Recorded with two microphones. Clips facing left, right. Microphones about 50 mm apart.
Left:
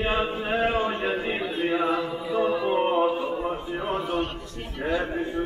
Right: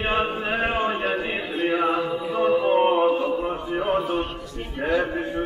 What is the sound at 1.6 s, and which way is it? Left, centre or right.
Mantra, right.